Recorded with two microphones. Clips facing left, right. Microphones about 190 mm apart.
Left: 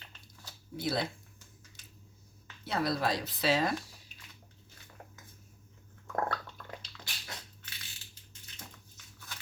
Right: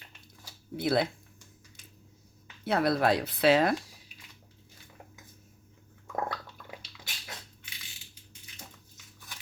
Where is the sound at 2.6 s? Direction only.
60° right (ahead or behind).